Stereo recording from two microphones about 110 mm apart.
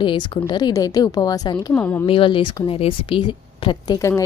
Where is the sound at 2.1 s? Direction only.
50° left (ahead or behind).